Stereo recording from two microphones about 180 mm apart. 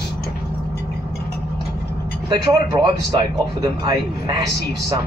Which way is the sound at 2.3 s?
25° right (ahead or behind).